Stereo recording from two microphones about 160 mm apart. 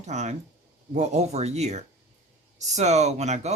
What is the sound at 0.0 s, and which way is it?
Speech, 45° right (ahead or behind).